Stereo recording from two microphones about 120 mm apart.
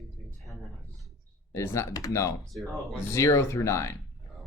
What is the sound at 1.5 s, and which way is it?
Speech, 25° left (ahead or behind).